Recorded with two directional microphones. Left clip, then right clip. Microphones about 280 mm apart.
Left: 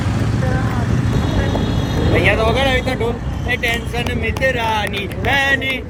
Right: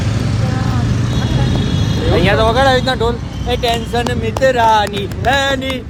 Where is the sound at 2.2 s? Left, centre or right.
Right.